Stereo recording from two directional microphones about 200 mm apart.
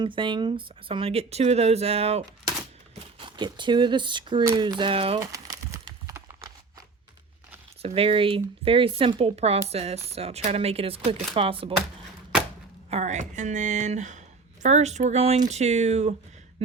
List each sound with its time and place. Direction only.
0.0 s speech: 25° right (ahead or behind)
5.2 s crumpling: 15° right (ahead or behind)
7.8 s speech: 30° right (ahead or behind)
12.9 s speech: 35° right (ahead or behind)
16.6 s a sound: 30° right (ahead or behind)